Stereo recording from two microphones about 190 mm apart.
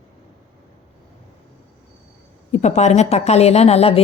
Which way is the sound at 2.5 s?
35° left (ahead or behind).